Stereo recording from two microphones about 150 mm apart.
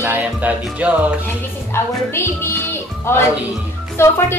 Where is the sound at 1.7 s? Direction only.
15° left (ahead or behind).